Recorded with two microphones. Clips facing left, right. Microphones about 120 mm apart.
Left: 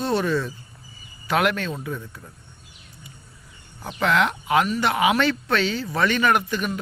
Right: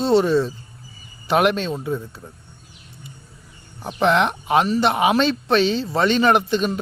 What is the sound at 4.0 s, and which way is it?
Speech, 25° right (ahead or behind).